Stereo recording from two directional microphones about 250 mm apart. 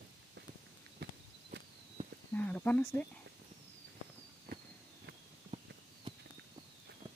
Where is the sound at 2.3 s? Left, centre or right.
Centre.